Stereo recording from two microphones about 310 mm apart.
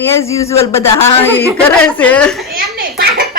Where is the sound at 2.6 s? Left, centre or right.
Right.